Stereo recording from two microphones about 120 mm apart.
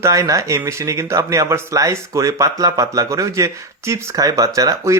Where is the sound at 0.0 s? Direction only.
25° right (ahead or behind).